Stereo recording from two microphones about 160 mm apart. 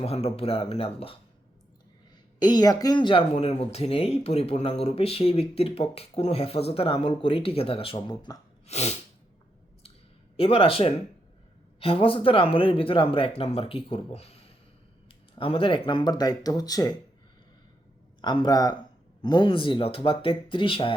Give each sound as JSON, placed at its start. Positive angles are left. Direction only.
{"t": 0.0, "sound": "speech", "side_deg": 40}
{"t": 2.4, "sound": "speech", "side_deg": 25}
{"t": 8.6, "sound": "sneeze", "side_deg": 45}
{"t": 10.3, "sound": "speech", "side_deg": 35}
{"t": 18.2, "sound": "speech", "side_deg": 30}